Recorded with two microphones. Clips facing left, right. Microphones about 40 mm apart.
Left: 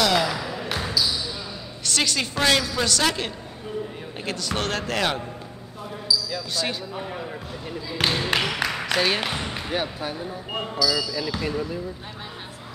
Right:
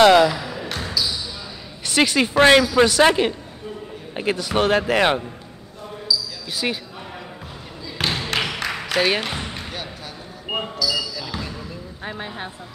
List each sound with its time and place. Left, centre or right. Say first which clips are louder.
0.0 s speech: right 9 dB; right
0.3 s basketball bounce: even; centre
1.9 s a woman's voice: right 6 dB; centre
6.5 s speech: right 4 dB; centre
8.0 s basketball bounce: even; centre
8.6 s a sound: right 5 dB; centre
9.2 s basketball bounce: even; centre
9.7 s speech: left 6 dB; left
10.8 s speech: left 1 dB; centre